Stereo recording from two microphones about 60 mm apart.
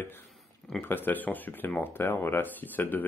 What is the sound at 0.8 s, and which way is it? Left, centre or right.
Speech, left.